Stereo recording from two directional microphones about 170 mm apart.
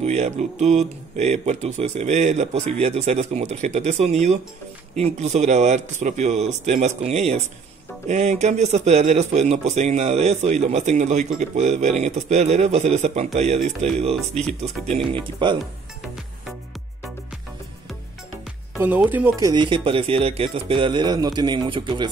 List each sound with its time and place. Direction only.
0.0 s speech: 40° right (ahead or behind)
14.1 s speech: centre (ahead or behind)
14.6 s speech: 35° right (ahead or behind)
18.9 s speech: 10° right (ahead or behind); by 22.0 s 30° right (ahead or behind)